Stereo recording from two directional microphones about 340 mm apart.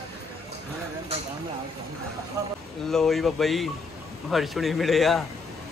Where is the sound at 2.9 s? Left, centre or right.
Centre.